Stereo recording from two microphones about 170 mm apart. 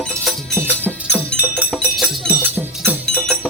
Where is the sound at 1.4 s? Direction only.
10° right (ahead or behind).